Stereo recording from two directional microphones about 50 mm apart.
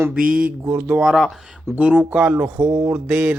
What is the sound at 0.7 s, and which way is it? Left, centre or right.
Speech, right.